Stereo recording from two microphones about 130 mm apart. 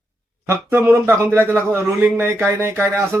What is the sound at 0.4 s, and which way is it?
A man's voice, 15° right (ahead or behind).